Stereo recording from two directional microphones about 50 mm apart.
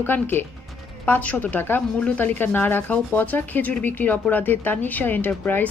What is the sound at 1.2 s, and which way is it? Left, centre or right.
A woman's voice, left.